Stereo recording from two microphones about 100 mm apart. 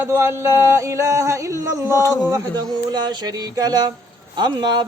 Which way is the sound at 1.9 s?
35° left (ahead or behind).